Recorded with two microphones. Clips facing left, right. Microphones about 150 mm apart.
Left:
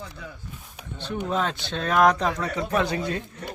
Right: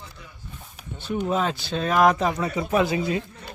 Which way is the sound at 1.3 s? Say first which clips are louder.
Right 1 dB; 5° right (ahead or behind).